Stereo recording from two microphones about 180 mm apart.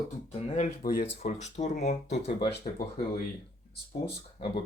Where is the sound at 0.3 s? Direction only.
35° left (ahead or behind).